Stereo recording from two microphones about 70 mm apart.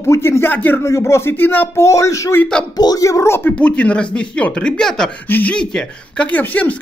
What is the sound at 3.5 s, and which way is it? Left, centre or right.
Speech, centre.